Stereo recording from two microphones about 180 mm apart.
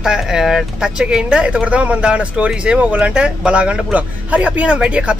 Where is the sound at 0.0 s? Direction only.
5° right (ahead or behind).